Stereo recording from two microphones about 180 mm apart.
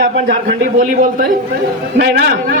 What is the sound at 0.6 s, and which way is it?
Speech, 50° right (ahead or behind).